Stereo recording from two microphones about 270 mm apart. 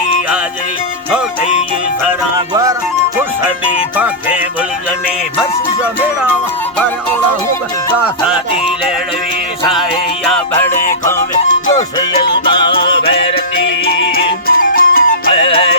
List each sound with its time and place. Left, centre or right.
3.9 s music: centre
5.4 s music: centre
10.2 s music: centre
11.8 s music: centre
14.4 s music: left
15.3 s music: centre